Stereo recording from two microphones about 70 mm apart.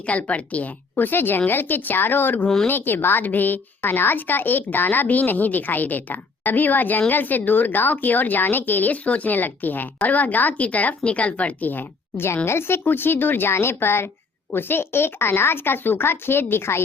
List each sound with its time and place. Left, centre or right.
0.0 s a woman's voice: centre; by 16.8 s left